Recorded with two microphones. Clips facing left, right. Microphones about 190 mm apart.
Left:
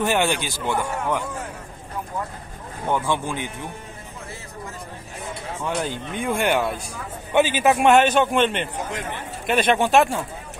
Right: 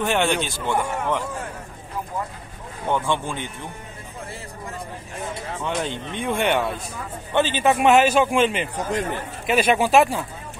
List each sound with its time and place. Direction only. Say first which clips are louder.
0.0 s a man's voice: even; 5° left (ahead or behind)
2.9 s speech: even; 10° left (ahead or behind)
5.6 s a man's voice: left 1 dB; 5° left (ahead or behind)
8.7 s speech: right 4 dB; 40° right (ahead or behind)
9.5 s a man's voice: even; 5° right (ahead or behind)